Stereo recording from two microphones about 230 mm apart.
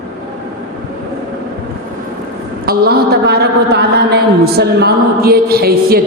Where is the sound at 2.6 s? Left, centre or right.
Right.